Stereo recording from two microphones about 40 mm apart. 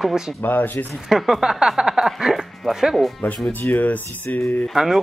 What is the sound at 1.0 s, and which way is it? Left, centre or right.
Speech, centre.